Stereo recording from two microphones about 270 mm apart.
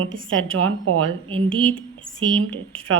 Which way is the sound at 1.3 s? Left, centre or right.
Centre.